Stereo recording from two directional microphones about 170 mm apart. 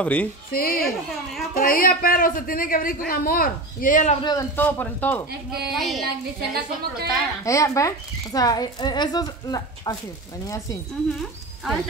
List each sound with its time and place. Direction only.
0.0 s speech: 5° left (ahead or behind)
0.5 s a man's voice: 60° left (ahead or behind)
4.2 s speech: 25° left (ahead or behind)
4.6 s a woman's voice: 10° left (ahead or behind)
6.0 s a woman's voice: 65° right (ahead or behind)
7.4 s speech: 20° left (ahead or behind)